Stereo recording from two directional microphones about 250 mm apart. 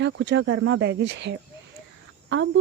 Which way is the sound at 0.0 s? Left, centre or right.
Right.